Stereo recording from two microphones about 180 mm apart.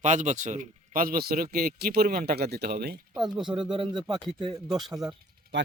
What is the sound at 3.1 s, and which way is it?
Speech, centre (ahead or behind).